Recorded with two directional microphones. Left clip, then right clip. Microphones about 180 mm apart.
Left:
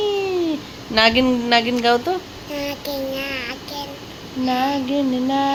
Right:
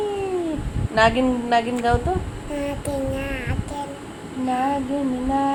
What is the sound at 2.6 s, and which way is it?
Child singing, 15° right (ahead or behind).